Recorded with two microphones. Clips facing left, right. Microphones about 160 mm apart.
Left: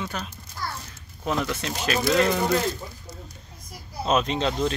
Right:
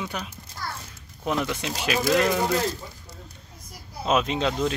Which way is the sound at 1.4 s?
15° right (ahead or behind).